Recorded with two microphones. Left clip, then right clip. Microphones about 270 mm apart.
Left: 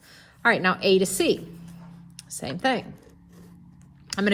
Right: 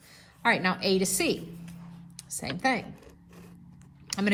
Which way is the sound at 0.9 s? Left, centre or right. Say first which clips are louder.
Left 5 dB; left.